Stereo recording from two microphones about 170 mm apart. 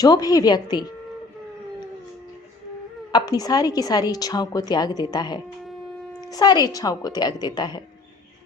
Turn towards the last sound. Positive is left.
turn(degrees=25)  # may be behind; listen again after turning